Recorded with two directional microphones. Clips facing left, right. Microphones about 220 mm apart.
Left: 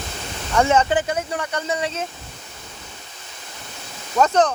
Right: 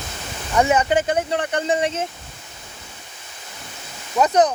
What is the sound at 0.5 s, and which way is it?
Speech, 15° right (ahead or behind).